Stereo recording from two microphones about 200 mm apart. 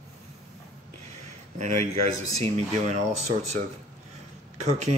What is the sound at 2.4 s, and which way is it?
Speech, 35° right (ahead or behind).